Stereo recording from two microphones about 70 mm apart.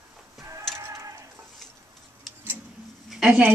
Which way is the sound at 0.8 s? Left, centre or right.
Right.